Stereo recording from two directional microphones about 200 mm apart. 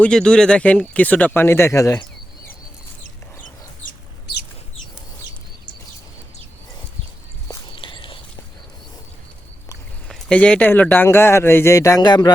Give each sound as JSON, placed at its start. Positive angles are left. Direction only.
{"t": 0.0, "sound": "a man's voice", "side_deg": 5}
{"t": 3.8, "sound": "chicken", "side_deg": 55}
{"t": 7.8, "sound": "a sound", "side_deg": 25}
{"t": 10.1, "sound": "a man's voice", "side_deg": 5}